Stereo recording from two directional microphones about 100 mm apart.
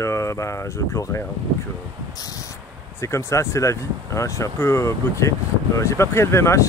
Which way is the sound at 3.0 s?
30° left (ahead or behind).